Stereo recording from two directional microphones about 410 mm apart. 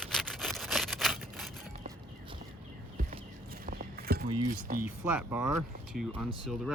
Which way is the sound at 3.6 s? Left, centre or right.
Right.